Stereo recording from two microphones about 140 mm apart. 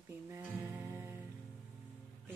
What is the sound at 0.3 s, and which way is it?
Music, 15° right (ahead or behind).